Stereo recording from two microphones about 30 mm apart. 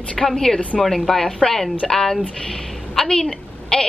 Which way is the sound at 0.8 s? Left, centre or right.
Centre.